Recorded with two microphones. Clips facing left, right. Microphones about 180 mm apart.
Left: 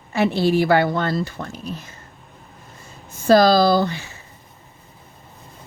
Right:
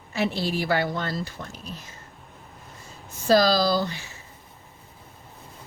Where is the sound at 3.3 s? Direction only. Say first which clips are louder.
Left 6 dB; 55° left (ahead or behind).